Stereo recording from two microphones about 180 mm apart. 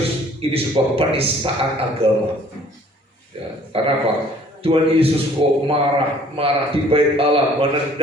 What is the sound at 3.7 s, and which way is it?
A man's voice, 30° right (ahead or behind).